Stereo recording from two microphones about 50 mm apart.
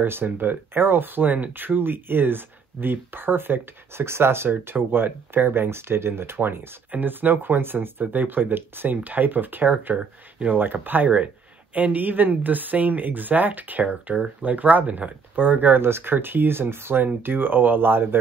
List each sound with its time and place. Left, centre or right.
0.0 s speech: right
4.5 s speech: right
15.8 s speech: right